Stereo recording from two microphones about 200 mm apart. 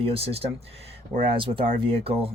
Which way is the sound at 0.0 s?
30° right (ahead or behind).